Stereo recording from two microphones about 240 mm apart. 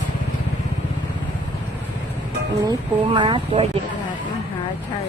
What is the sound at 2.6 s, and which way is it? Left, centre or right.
Speech, centre.